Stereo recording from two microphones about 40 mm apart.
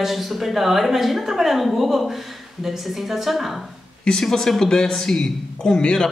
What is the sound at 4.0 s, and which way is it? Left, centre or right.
A man's voice, centre.